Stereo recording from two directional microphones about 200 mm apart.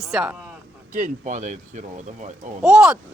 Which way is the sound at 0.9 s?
40° right (ahead or behind).